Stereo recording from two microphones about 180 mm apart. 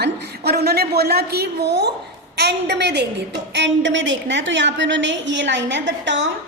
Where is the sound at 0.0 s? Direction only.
65° right (ahead or behind).